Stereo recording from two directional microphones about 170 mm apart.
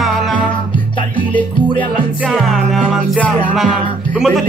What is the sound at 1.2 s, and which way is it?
Music, 30° left (ahead or behind).